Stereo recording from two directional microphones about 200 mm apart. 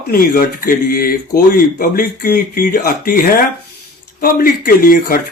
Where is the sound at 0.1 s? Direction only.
45° left (ahead or behind).